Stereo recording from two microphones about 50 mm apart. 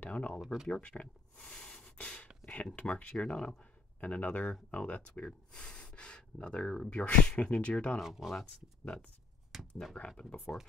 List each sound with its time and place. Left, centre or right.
0.0 s speech: left
0.4 s speech: centre
0.7 s speech: left
1.5 s a sound: centre
2.4 s speech: left
4.0 s speech: left
8.0 s speech: centre
9.5 s speech: centre
10.0 s speech: left